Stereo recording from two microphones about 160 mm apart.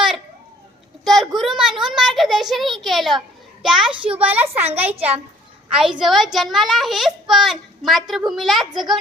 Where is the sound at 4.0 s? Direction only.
35° right (ahead or behind).